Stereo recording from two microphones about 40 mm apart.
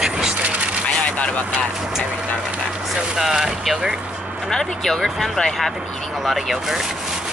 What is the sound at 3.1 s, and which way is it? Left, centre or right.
Speech, centre.